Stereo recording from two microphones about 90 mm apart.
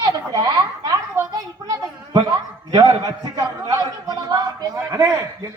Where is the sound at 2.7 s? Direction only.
45° right (ahead or behind).